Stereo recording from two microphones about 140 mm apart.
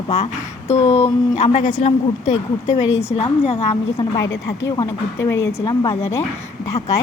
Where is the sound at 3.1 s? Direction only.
45° left (ahead or behind).